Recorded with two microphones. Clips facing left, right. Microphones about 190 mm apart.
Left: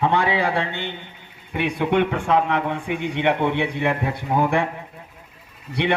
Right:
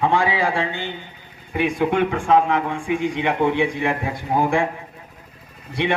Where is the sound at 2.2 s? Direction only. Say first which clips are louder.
Right 3 dB; 65° left (ahead or behind).